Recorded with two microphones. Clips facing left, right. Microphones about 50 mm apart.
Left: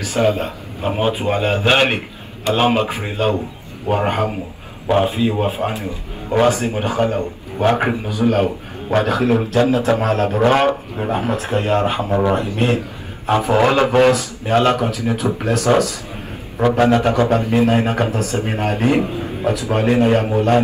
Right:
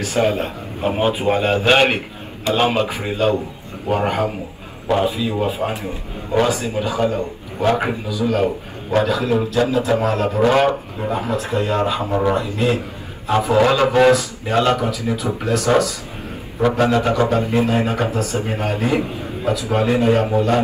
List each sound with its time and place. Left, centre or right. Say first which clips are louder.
0.2 s a man's voice: left 2 dB; centre
2.9 s a man's voice: right 1 dB; left
16.7 s a man's voice: left 3 dB; left